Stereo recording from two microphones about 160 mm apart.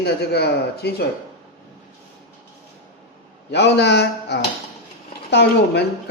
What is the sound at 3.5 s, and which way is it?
A man's voice, 90° left.